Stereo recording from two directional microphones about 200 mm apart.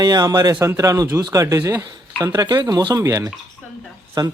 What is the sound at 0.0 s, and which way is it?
Speech, 20° right (ahead or behind).